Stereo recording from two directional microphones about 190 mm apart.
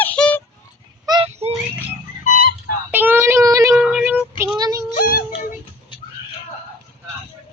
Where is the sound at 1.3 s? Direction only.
35° right (ahead or behind).